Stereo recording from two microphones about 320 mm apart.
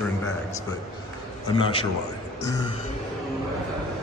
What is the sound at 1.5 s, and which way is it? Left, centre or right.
Speech, centre.